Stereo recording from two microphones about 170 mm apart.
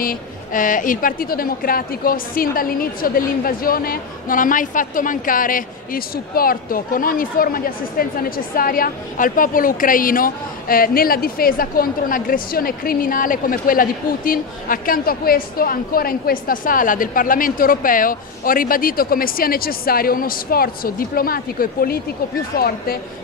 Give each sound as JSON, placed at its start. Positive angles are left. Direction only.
{"t": 0.0, "sound": "a woman's voice", "side_deg": 55}